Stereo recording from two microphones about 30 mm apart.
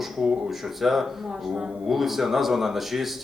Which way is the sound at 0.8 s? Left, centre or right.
Centre.